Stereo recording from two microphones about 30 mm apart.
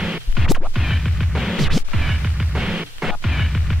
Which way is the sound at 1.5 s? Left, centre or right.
Centre.